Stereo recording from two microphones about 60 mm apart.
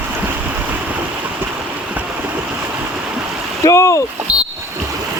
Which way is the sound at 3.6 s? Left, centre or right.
Left.